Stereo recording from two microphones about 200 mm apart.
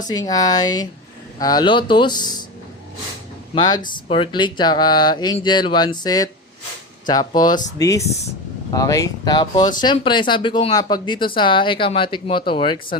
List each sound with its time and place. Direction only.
0.1 s speech: 20° left (ahead or behind)
3.5 s speech: 20° left (ahead or behind)